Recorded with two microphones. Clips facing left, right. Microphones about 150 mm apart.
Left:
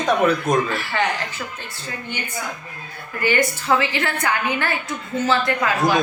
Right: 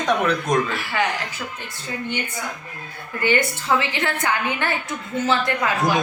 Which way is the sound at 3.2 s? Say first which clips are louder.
Left 1 dB; 20° right (ahead or behind).